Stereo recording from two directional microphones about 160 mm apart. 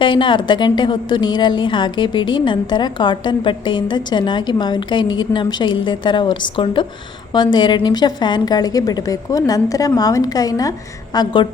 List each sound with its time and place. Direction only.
0.0 s a woman's voice: 30° left (ahead or behind)